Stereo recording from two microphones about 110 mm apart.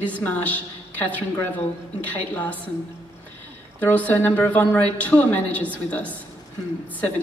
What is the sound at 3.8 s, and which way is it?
A woman's voice, 15° left (ahead or behind).